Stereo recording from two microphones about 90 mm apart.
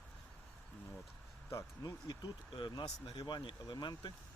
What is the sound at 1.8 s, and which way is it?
Speech, 50° left (ahead or behind).